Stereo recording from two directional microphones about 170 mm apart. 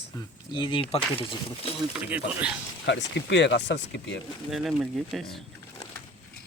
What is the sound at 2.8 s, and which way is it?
Speech, 90° left.